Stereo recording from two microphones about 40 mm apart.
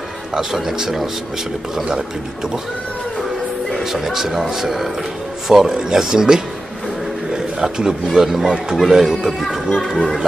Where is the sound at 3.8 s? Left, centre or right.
Centre.